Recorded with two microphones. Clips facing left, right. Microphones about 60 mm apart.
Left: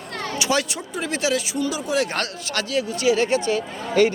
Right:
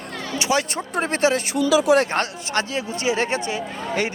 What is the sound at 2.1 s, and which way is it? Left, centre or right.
Speech, right.